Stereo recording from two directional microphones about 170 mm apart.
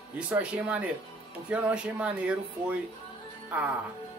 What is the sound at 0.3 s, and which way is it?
Speech, 10° right (ahead or behind).